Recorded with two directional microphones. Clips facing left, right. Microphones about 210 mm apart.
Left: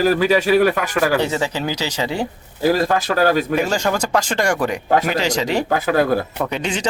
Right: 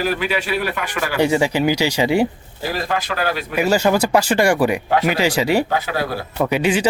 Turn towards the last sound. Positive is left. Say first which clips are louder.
# right 5 dB
turn(degrees=-5)  # may be behind; listen again after turning